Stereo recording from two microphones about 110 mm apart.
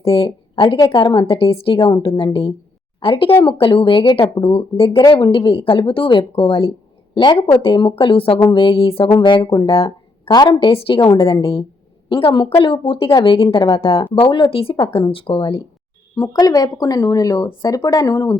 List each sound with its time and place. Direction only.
0.0 s speech: 55° left (ahead or behind)
0.9 s speech: 40° left (ahead or behind)
1.3 s speech: 60° left (ahead or behind)
1.8 s speech: 40° left (ahead or behind)
2.0 s speech: 55° left (ahead or behind)
4.4 s speech: 55° left (ahead or behind)
7.5 s speech: 55° left (ahead or behind)
9.7 s a sound: 60° left (ahead or behind)
10.3 s speech: 40° left (ahead or behind)
13.5 s speech: 35° left (ahead or behind)
13.7 s speech: 60° left (ahead or behind)
16.3 s speech: 35° left (ahead or behind)